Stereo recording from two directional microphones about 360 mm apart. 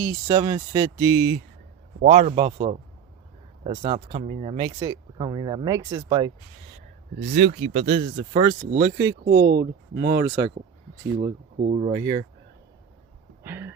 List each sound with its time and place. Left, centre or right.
0.0 s speech: centre
7.3 s speech: centre
9.0 s speech: right
13.4 s a sound: centre